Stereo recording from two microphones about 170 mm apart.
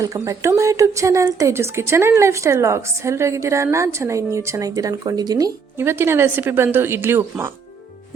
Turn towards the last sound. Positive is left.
turn(degrees=-15)  # may be behind; listen again after turning